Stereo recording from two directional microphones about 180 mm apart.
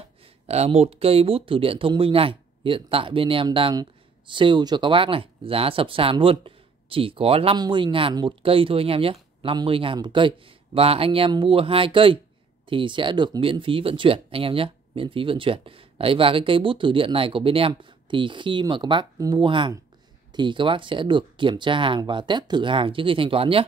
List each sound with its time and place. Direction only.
0.5 s speech: 35° right (ahead or behind)